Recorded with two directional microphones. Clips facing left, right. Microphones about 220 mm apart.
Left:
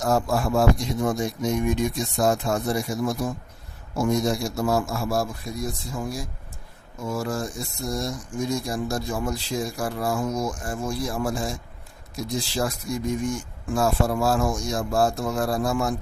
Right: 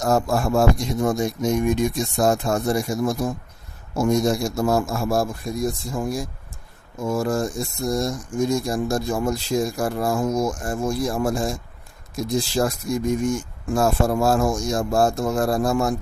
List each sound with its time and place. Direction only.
0.0 s speech: 45° right (ahead or behind)